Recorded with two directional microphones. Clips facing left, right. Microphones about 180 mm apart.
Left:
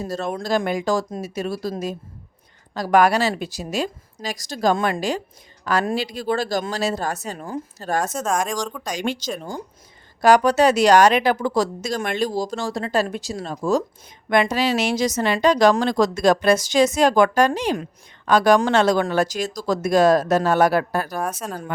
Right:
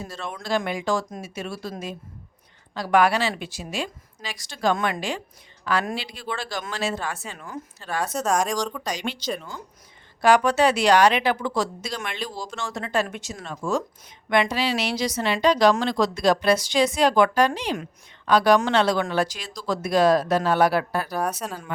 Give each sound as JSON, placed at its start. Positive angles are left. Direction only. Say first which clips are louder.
{"t": 0.0, "sound": "speech", "louder": "left 8 dB", "side_deg": 40}
{"t": 8.2, "sound": "speech", "louder": "even", "side_deg": 0}
{"t": 9.0, "sound": "a woman's voice", "louder": "left 4 dB", "side_deg": 45}
{"t": 21.2, "sound": "speech", "louder": "even", "side_deg": 0}